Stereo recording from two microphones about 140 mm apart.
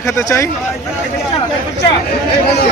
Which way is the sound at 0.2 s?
20° left (ahead or behind).